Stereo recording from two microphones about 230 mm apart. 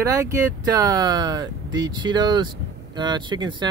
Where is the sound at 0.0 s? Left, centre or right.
Centre.